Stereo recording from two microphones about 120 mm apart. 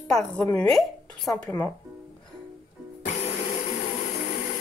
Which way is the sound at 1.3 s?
20° left (ahead or behind).